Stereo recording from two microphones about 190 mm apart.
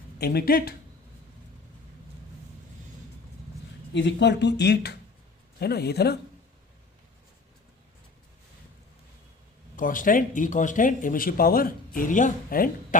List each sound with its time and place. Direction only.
0.2 s speech: 55° left (ahead or behind)
3.9 s speech: 65° left (ahead or behind)
9.7 s speech: 45° left (ahead or behind)